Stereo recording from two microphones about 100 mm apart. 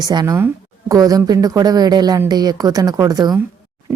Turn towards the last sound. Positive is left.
turn(degrees=-40)  # may be behind; listen again after turning